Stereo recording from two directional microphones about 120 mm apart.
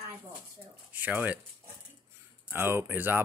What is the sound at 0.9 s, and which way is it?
Speech, 15° right (ahead or behind).